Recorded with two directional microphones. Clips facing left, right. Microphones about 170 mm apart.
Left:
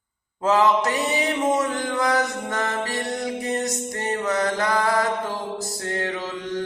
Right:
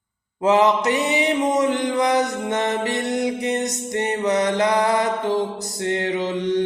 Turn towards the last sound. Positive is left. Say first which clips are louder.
# right 7 dB
turn(degrees=-20)  # may be behind; listen again after turning